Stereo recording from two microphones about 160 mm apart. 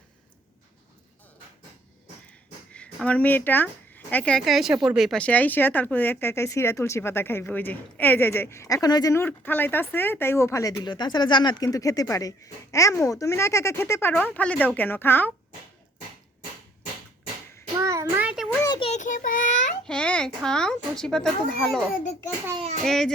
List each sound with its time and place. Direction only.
2.7 s speech: 5° left (ahead or behind)
17.7 s a sound: 20° right (ahead or behind)
18.6 s a sound: 25° left (ahead or behind)
18.9 s child singing: 50° left (ahead or behind)
19.8 s a child's voice: 5° left (ahead or behind)
22.9 s speech: 5° left (ahead or behind)